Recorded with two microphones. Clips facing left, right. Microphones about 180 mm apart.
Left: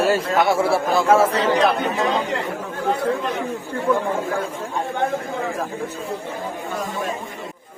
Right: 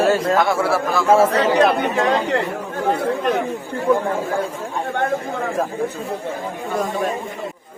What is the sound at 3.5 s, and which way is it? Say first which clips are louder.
Speech: right 2 dB; 20° right (ahead or behind).